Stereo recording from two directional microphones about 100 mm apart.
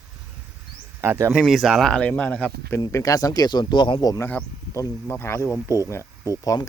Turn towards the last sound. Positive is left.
turn(degrees=35)  # may be behind; listen again after turning